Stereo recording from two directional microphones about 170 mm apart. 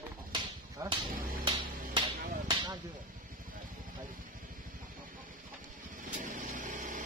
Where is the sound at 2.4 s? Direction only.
25° right (ahead or behind).